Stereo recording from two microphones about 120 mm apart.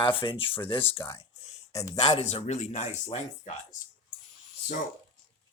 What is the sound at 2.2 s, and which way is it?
Speech, 60° left (ahead or behind).